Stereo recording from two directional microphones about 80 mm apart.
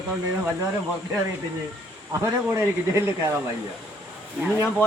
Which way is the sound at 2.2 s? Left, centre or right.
Right.